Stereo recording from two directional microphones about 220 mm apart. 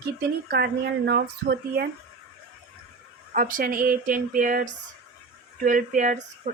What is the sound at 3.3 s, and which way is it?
Speech, 40° right (ahead or behind).